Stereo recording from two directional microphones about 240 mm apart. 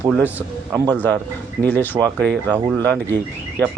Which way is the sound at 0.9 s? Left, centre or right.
Centre.